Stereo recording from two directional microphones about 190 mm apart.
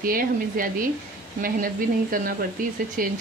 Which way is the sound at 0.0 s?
50° right (ahead or behind).